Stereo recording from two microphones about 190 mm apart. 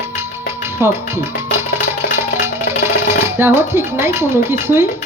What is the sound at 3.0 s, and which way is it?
Speech, 15° right (ahead or behind).